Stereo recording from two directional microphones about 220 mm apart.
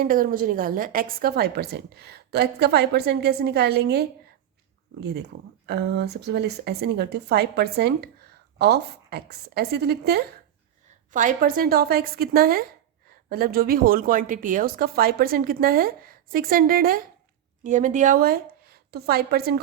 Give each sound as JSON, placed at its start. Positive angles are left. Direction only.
{"t": 0.0, "sound": "a woman's voice", "side_deg": -40}
{"t": 11.1, "sound": "a woman's voice", "side_deg": -35}